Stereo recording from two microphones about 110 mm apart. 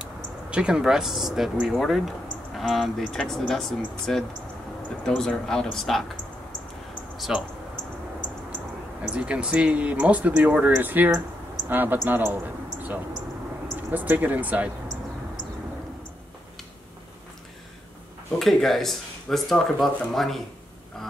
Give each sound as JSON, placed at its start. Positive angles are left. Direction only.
{"t": 0.0, "sound": "speech", "side_deg": -10}
{"t": 7.2, "sound": "speech", "side_deg": -5}
{"t": 9.0, "sound": "a man's voice", "side_deg": -10}
{"t": 18.4, "sound": "speech", "side_deg": 0}